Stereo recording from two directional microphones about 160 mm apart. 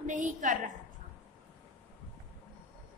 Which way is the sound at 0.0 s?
50° right (ahead or behind).